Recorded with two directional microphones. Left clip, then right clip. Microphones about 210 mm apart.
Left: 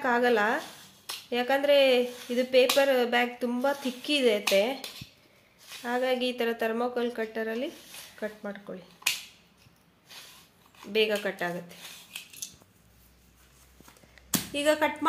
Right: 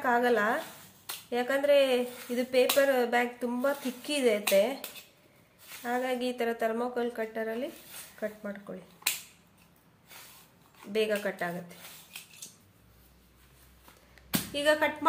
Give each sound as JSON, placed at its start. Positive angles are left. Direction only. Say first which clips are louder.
{"t": 0.0, "sound": "speech", "louder": "left 2 dB", "side_deg": 20}
{"t": 5.8, "sound": "speech", "louder": "left 3 dB", "side_deg": 20}
{"t": 10.9, "sound": "speech", "louder": "left 3 dB", "side_deg": 20}
{"t": 14.5, "sound": "speech", "louder": "left 1 dB", "side_deg": 25}